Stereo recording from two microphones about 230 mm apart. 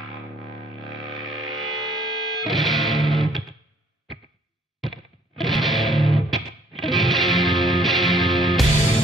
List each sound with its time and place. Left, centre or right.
0.7 s music: centre
5.4 s music: centre
8.7 s music: left